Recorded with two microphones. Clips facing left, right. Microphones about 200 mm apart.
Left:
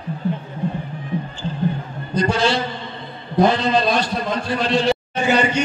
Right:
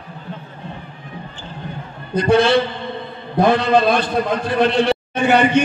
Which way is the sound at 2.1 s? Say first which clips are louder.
Right 5 dB; 60° right (ahead or behind).